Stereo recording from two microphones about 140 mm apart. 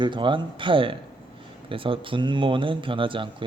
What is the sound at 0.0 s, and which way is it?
Speech, 35° right (ahead or behind).